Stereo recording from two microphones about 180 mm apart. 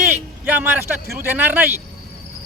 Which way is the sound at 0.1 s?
10° right (ahead or behind).